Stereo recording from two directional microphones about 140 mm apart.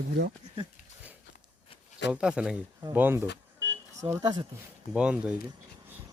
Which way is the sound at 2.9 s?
15° right (ahead or behind).